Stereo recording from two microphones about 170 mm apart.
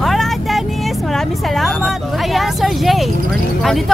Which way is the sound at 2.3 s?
Centre (ahead or behind).